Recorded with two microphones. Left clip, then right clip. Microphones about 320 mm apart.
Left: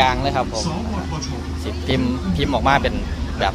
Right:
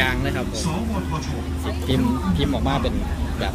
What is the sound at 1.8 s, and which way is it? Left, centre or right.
Speech, centre.